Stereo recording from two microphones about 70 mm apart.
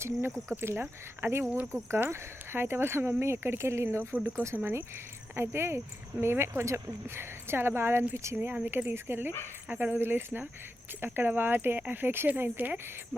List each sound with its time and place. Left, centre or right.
0.0 s speech: right
9.0 s speech: right